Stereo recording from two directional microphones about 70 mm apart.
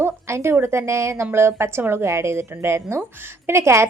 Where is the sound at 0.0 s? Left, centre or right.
Right.